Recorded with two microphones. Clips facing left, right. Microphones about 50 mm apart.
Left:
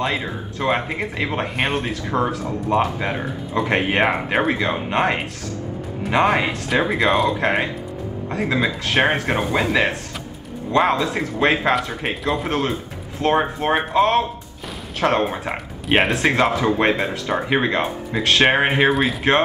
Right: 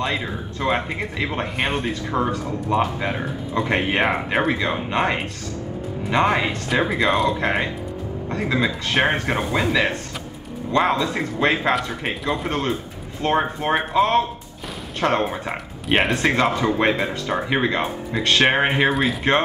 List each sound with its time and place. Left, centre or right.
0.0 s speech: centre
10.7 s speech: centre
15.2 s speech: centre